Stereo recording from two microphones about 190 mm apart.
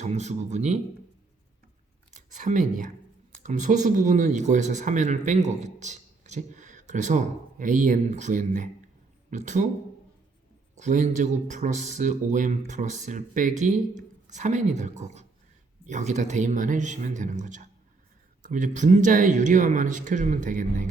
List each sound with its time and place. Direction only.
0.0 s speech: 35° right (ahead or behind)
2.1 s speech: 40° right (ahead or behind)
10.8 s speech: 40° right (ahead or behind)